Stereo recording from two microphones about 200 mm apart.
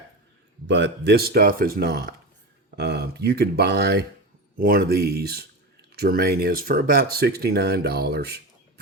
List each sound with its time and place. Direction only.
0.7 s speech: 60° right (ahead or behind)